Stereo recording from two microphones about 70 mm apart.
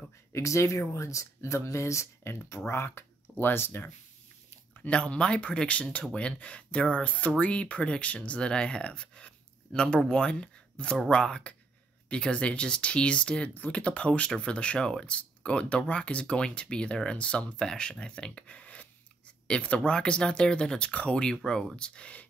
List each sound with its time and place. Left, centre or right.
0.3 s speech: left
4.8 s speech: centre